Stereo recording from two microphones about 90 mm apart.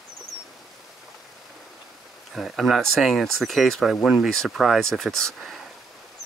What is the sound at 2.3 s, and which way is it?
Speech, centre (ahead or behind).